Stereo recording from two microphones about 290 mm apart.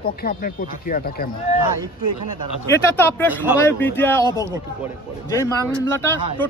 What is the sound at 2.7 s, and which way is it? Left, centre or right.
Speech, centre.